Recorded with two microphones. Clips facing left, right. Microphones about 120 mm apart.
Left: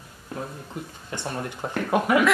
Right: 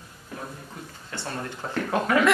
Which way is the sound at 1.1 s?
15° left (ahead or behind).